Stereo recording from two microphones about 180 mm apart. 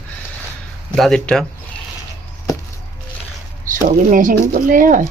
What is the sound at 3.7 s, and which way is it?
Speech, 50° right (ahead or behind).